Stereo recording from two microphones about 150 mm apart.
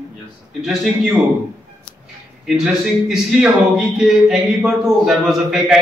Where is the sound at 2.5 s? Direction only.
5° right (ahead or behind).